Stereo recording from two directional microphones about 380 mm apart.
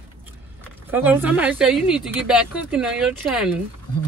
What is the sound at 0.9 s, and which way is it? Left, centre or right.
Speech, centre.